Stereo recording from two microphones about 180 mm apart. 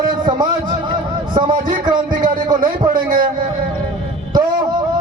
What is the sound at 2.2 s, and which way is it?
Speech, 50° right (ahead or behind).